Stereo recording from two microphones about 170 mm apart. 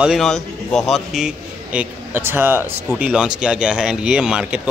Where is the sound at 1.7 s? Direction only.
15° right (ahead or behind).